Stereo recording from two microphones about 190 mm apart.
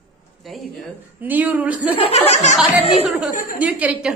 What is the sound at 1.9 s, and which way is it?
Speech, 30° left (ahead or behind).